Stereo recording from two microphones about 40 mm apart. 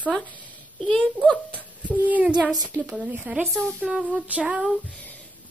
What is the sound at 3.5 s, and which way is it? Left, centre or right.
Speech, centre.